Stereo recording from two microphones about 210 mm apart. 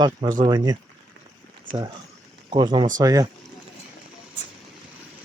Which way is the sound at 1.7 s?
40° right (ahead or behind).